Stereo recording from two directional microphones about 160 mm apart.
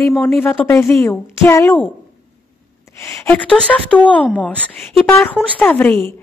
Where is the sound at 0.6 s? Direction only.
15° left (ahead or behind).